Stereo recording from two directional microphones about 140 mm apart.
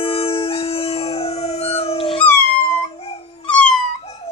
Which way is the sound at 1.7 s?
45° left (ahead or behind).